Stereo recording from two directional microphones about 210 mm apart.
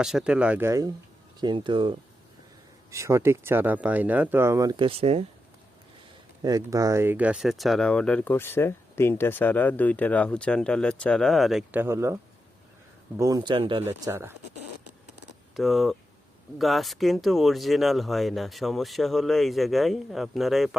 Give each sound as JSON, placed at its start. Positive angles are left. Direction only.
{"t": 0.0, "sound": "speech", "side_deg": 0}
{"t": 6.4, "sound": "speech", "side_deg": -15}
{"t": 13.8, "sound": "speech", "side_deg": -10}
{"t": 15.5, "sound": "speech", "side_deg": 0}